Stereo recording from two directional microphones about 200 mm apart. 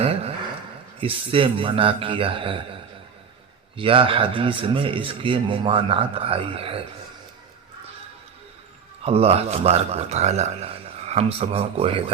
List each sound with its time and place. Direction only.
0.0 s a sound: 30° right (ahead or behind)
1.0 s speech: 25° right (ahead or behind)
3.8 s speech: 25° right (ahead or behind)
9.0 s a man's voice: 30° right (ahead or behind)